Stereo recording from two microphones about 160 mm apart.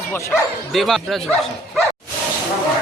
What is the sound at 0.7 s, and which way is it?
Speech, centre (ahead or behind).